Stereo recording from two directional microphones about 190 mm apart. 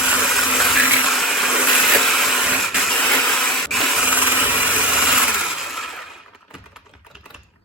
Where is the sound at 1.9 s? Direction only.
Centre (ahead or behind).